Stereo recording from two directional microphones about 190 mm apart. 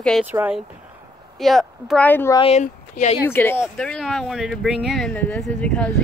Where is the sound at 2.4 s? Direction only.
35° left (ahead or behind).